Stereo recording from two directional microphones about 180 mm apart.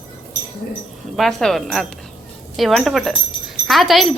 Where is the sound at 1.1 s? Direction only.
Centre (ahead or behind).